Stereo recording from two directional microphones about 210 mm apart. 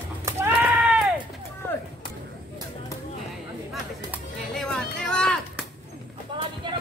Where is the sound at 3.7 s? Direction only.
Centre (ahead or behind).